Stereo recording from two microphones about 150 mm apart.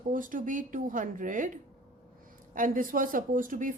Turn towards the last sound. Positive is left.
turn(degrees=-60)  # may be behind; listen again after turning